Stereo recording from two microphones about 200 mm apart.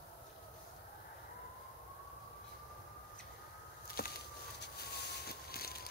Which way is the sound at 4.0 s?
50° left (ahead or behind).